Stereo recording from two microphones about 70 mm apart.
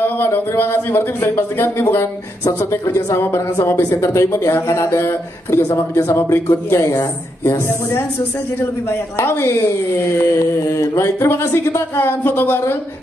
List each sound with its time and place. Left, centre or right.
0.0 s speech: left
9.2 s speech: left